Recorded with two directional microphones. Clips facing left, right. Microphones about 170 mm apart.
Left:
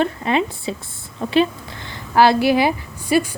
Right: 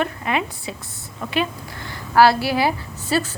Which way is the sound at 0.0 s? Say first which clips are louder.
Left 4 dB; 30° left (ahead or behind).